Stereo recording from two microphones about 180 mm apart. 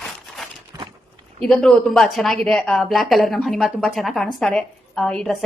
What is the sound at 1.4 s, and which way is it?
Speech, 5° left (ahead or behind).